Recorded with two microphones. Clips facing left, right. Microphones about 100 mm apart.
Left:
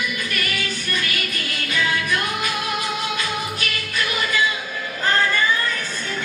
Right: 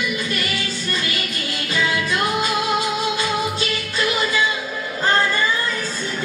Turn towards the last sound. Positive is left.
turn(degrees=-30)  # may be behind; listen again after turning